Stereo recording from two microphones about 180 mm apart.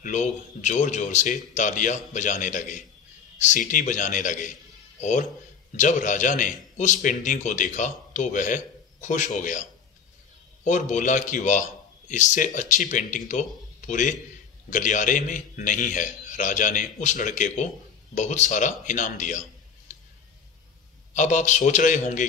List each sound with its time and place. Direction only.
0.0 s a man's voice: 40° left (ahead or behind)
21.1 s a man's voice: 45° left (ahead or behind)